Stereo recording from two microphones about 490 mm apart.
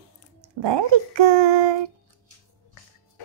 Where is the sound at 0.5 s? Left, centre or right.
Right.